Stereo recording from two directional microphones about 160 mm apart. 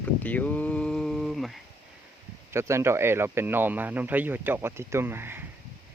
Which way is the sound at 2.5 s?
15° right (ahead or behind).